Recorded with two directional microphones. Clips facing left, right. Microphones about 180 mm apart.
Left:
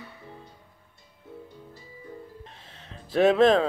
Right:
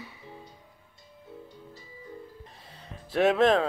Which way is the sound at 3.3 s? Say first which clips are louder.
Left 3 dB; 5° right (ahead or behind).